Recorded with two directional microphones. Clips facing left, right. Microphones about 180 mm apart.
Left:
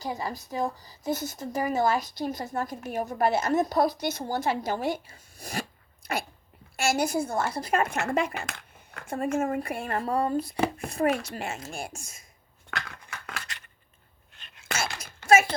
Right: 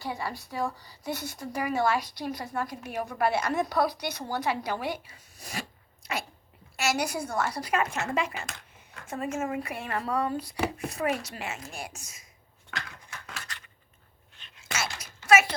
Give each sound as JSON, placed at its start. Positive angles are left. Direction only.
{"t": 0.4, "sound": "a woman's voice", "side_deg": 20}
{"t": 0.8, "sound": "speech", "side_deg": 45}
{"t": 6.7, "sound": "speech", "side_deg": 50}
{"t": 7.2, "sound": "a woman's voice", "side_deg": 25}
{"t": 7.6, "sound": "speech", "side_deg": 50}
{"t": 10.1, "sound": "a woman's voice", "side_deg": 30}
{"t": 10.3, "sound": "speech", "side_deg": 50}
{"t": 12.7, "sound": "a sound", "side_deg": 60}
{"t": 14.3, "sound": "whispering", "side_deg": 55}